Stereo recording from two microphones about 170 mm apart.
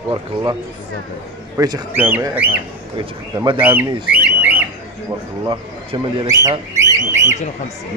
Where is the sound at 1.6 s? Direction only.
20° right (ahead or behind).